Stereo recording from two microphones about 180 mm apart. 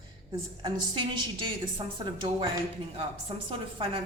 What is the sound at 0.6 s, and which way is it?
A woman's voice, 25° right (ahead or behind).